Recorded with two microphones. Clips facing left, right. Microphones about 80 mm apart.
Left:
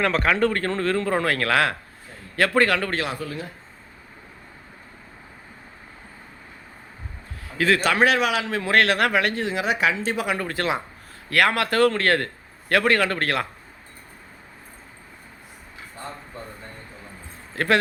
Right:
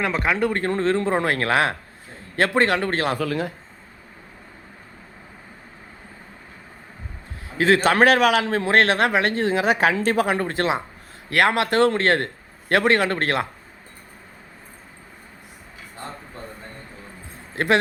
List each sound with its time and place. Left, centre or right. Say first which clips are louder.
0.0 s a man's voice: left 1 dB; centre
3.2 s a man's voice: right 7 dB; right
7.4 s a man's voice: right 3 dB; right
7.9 s a man's voice: right 4 dB; right
10.2 s a man's voice: right 3 dB; right
17.5 s speech: right 1 dB; right